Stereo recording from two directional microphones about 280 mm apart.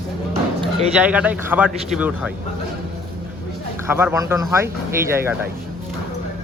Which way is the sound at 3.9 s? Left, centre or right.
Centre.